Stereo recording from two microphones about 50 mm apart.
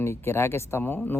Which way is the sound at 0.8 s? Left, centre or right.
Left.